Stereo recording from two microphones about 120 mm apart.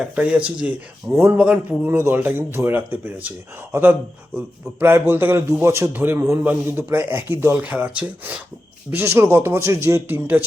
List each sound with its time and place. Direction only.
0.0 s a man's voice: 10° right (ahead or behind)